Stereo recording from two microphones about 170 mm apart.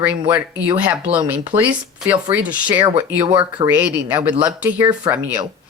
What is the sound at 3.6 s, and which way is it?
A woman's voice, 10° right (ahead or behind).